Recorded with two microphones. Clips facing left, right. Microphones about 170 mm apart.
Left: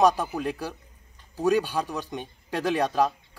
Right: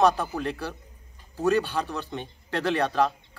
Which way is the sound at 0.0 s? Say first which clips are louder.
Left 1 dB; 10° left (ahead or behind).